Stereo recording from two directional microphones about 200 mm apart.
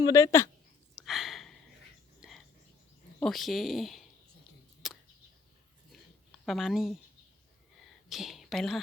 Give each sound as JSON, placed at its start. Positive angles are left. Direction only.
{"t": 0.0, "sound": "speech", "side_deg": 15}
{"t": 1.0, "sound": "a sound", "side_deg": 0}
{"t": 2.2, "sound": "frog", "side_deg": -5}
{"t": 3.2, "sound": "speech", "side_deg": 0}
{"t": 4.8, "sound": "a sound", "side_deg": 0}
{"t": 6.4, "sound": "a woman's voice", "side_deg": 0}
{"t": 8.1, "sound": "a woman's voice", "side_deg": 0}